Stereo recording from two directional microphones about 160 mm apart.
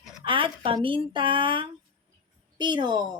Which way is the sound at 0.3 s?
35° right (ahead or behind).